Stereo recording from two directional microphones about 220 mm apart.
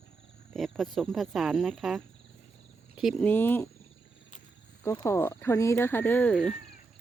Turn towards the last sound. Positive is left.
turn(degrees=5)  # may be behind; listen again after turning